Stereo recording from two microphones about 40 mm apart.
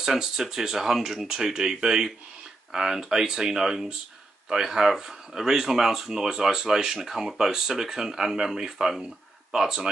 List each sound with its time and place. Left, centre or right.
0.0 s speech: centre